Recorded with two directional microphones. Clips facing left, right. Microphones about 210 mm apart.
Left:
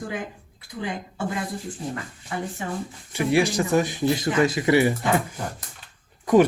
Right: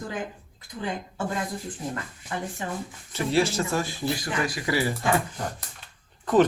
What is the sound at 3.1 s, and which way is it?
Speech, 15° left (ahead or behind).